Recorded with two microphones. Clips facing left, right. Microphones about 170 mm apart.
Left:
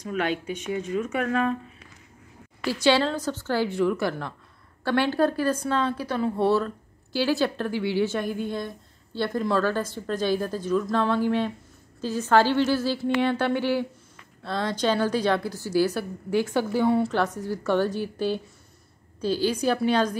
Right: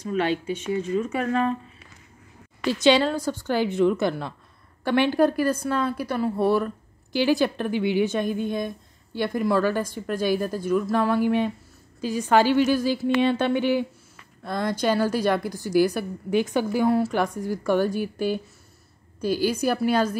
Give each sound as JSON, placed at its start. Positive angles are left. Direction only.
{"t": 0.5, "sound": "speech", "side_deg": 5}
{"t": 2.6, "sound": "a woman's voice", "side_deg": -20}